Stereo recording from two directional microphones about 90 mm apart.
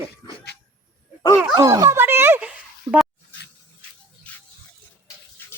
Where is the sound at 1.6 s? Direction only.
45° right (ahead or behind).